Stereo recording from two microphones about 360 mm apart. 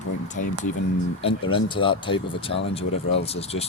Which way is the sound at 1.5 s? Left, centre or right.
Centre.